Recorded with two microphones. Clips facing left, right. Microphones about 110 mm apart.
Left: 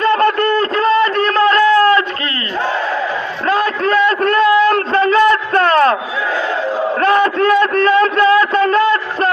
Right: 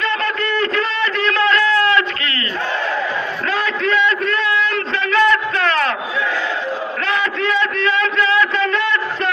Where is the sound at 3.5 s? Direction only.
45° left (ahead or behind).